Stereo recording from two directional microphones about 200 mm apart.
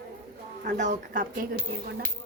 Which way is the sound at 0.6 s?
40° right (ahead or behind).